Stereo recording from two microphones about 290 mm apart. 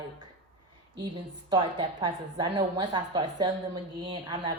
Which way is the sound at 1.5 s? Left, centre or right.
Centre.